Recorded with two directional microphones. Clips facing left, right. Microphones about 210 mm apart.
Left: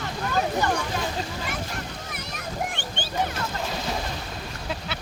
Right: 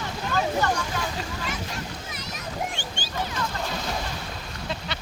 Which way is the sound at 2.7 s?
60° left (ahead or behind).